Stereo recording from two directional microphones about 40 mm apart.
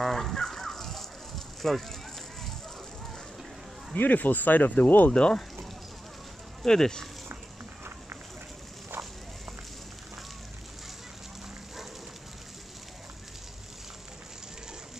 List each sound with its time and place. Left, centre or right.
0.0 s chicken: centre
3.9 s speech: left
5.1 s speech: left
6.6 s speech: centre